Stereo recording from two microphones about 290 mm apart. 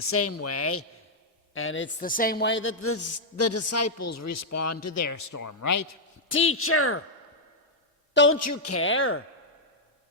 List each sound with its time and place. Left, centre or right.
0.1 s a man's voice: left
2.0 s a man's voice: left
6.3 s speech: left
8.1 s a man's voice: left
8.4 s speech: left